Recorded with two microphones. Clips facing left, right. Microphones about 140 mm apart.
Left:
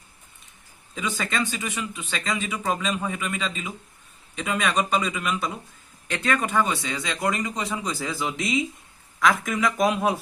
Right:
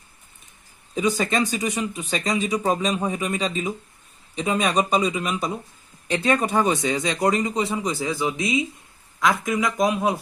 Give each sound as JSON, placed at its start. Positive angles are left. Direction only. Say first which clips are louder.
{"t": 0.9, "sound": "speech", "louder": "right 6 dB", "side_deg": -40}
{"t": 8.3, "sound": "speech", "louder": "right 2 dB", "side_deg": 0}
{"t": 9.6, "sound": "speech", "louder": "left 1 dB", "side_deg": 0}